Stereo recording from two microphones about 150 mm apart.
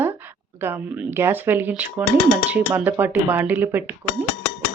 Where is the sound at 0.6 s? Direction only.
15° right (ahead or behind).